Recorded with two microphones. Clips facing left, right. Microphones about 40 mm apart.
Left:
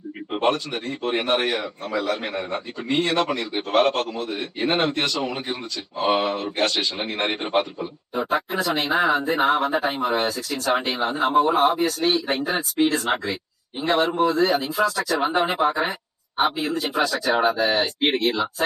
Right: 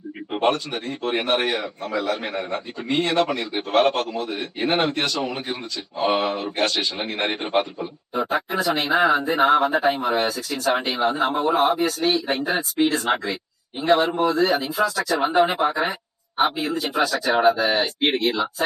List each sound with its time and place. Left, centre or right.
0.3 s a man's voice: centre